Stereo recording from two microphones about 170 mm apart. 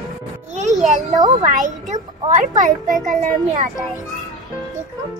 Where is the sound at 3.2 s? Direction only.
50° right (ahead or behind).